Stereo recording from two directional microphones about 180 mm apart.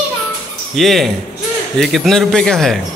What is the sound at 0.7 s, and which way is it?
A man's voice, centre (ahead or behind).